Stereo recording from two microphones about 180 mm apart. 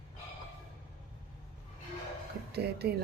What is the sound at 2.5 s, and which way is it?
Speech, 60° right (ahead or behind).